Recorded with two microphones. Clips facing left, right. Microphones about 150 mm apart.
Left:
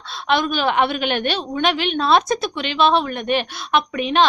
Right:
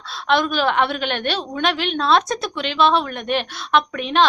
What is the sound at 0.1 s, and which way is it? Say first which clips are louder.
A woman's voice: right 1 dB; centre (ahead or behind).